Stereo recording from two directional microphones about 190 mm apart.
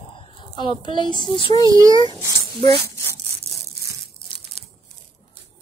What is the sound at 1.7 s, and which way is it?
Speech, 20° right (ahead or behind).